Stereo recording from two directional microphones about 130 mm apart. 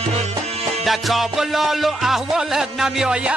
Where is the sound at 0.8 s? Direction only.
Centre (ahead or behind).